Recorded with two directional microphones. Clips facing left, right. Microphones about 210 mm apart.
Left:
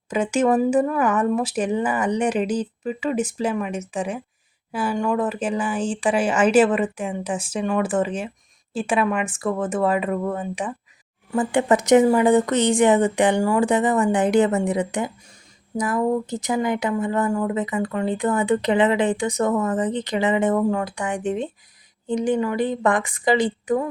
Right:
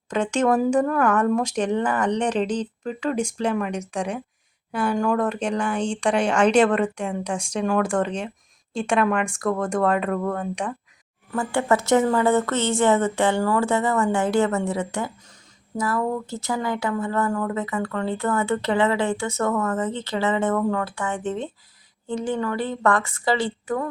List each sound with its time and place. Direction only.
0.1 s speech: 5° left (ahead or behind)
11.3 s speech: 15° left (ahead or behind)